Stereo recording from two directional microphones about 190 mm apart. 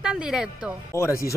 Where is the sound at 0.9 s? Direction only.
15° left (ahead or behind).